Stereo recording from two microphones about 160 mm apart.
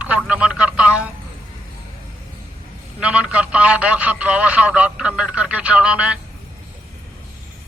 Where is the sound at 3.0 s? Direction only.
5° right (ahead or behind).